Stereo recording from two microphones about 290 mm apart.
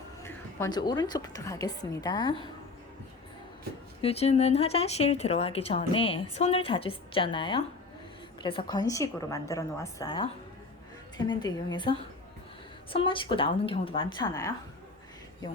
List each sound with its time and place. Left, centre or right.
0.2 s a woman's voice: centre
4.0 s a woman's voice: left
11.3 s a woman's voice: centre